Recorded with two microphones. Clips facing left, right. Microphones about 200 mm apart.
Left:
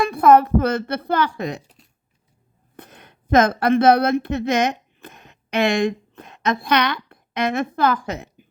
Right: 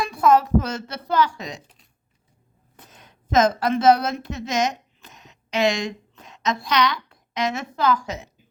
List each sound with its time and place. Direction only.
0.0 s speech: 55° left (ahead or behind)
2.7 s a woman's voice: 60° left (ahead or behind)